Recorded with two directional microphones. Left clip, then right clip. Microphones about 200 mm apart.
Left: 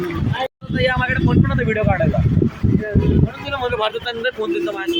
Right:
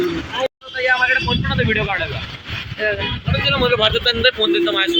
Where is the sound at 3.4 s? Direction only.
55° left (ahead or behind); by 5.0 s 35° left (ahead or behind).